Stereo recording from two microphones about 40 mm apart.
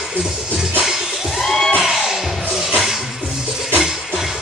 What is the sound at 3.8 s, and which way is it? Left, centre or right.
Music, centre.